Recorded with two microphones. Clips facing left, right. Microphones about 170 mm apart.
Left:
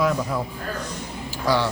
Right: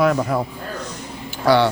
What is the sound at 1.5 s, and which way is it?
Speech, 65° right (ahead or behind).